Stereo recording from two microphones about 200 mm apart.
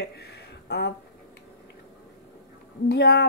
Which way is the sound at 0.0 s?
55° left (ahead or behind).